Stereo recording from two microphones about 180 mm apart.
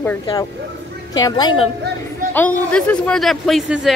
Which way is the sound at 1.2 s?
25° left (ahead or behind).